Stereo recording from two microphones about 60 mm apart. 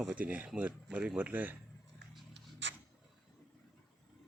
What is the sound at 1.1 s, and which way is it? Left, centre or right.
Speech, right.